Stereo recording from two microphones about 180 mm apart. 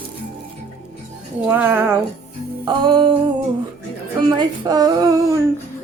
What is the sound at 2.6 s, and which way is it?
Speech, 25° right (ahead or behind).